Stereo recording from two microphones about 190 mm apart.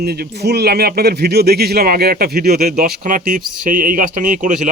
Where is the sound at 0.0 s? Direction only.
55° right (ahead or behind).